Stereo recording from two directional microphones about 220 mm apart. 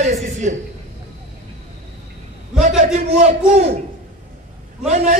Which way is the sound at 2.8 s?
30° right (ahead or behind).